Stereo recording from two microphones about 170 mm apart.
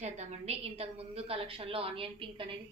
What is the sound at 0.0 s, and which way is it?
A woman's voice, 40° right (ahead or behind).